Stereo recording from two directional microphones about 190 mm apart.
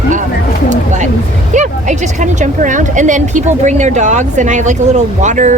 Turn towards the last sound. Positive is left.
turn(degrees=-40)  # may be behind; listen again after turning